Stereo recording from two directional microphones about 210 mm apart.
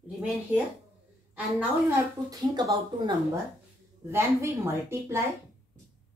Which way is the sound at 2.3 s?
20° right (ahead or behind).